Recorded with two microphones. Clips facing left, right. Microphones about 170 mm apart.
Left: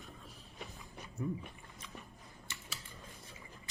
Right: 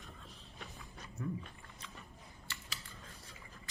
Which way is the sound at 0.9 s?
15° left (ahead or behind).